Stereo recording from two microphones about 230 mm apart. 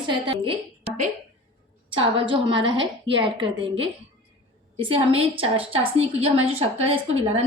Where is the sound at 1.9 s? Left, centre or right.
Right.